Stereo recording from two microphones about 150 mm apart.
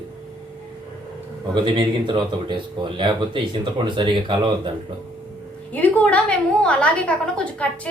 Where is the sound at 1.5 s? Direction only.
30° right (ahead or behind).